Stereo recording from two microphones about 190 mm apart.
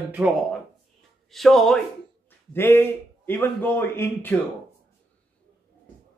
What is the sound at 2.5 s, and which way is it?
A man's voice, 10° left (ahead or behind).